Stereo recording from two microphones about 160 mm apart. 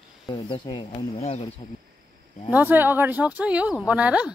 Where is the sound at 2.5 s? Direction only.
10° right (ahead or behind).